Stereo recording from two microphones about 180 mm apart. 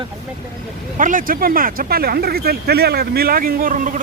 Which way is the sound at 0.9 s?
50° right (ahead or behind).